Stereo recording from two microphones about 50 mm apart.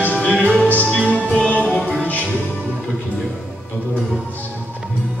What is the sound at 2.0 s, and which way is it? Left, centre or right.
Music, left.